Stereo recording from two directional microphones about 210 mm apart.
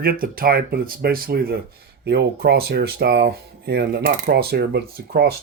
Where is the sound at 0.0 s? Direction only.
45° right (ahead or behind).